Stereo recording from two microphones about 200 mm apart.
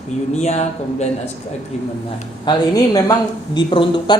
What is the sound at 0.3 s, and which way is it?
Speech, 35° left (ahead or behind).